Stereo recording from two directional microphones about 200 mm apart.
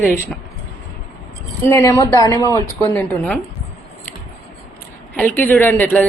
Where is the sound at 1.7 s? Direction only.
15° left (ahead or behind).